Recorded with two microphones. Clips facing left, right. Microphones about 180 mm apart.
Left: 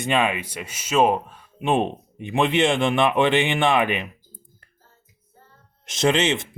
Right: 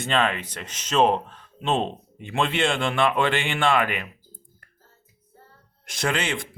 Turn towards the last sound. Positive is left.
turn(degrees=20)  # may be behind; listen again after turning